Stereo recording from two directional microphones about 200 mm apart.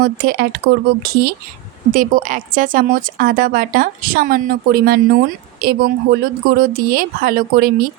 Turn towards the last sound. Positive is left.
turn(degrees=-45)  # may be behind; listen again after turning